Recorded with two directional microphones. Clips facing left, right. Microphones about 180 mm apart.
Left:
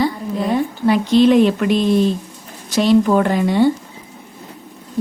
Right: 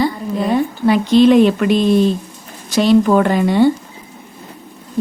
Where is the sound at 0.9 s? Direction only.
80° right.